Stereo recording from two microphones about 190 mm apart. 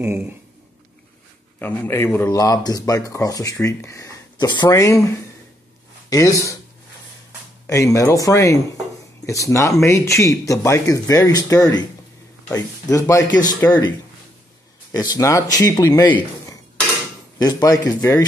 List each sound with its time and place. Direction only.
0.0 s speech: 10° right (ahead or behind)
1.6 s speech: 10° left (ahead or behind)
6.0 s speech: 15° left (ahead or behind)
7.6 s a man's voice: 15° left (ahead or behind)